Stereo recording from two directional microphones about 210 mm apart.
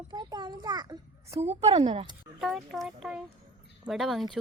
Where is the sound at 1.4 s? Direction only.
30° right (ahead or behind).